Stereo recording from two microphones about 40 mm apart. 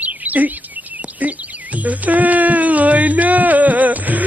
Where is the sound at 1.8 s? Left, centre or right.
Right.